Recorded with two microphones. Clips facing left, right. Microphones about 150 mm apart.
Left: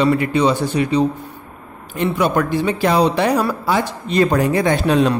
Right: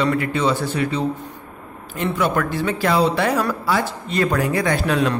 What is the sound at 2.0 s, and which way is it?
Speech, 15° left (ahead or behind).